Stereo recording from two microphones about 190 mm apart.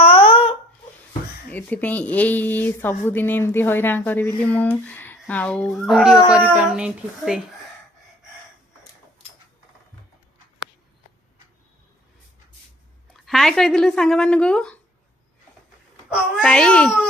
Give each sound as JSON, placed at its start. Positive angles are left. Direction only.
{"t": 0.0, "sound": "a sound", "side_deg": 30}
{"t": 1.5, "sound": "speech", "side_deg": 10}
{"t": 13.1, "sound": "speech", "side_deg": 0}
{"t": 16.0, "sound": "a child's voice", "side_deg": -5}
{"t": 16.5, "sound": "speech", "side_deg": 5}